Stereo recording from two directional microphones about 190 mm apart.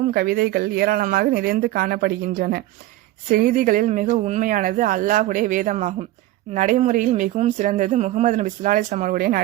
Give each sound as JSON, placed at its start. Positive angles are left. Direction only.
{"t": 0.1, "sound": "speech", "side_deg": -55}